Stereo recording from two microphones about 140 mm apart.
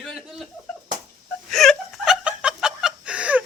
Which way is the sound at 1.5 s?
5° left (ahead or behind).